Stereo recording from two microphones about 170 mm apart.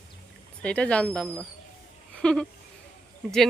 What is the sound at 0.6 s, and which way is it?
Speech, 5° left (ahead or behind).